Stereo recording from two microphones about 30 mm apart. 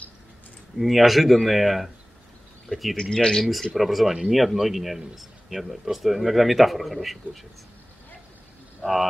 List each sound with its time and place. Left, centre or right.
0.7 s speech: centre
3.2 s speech: left
3.7 s speech: centre
8.8 s speech: centre